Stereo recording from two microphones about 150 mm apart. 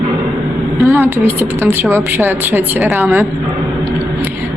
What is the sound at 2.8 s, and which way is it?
Speech, centre (ahead or behind).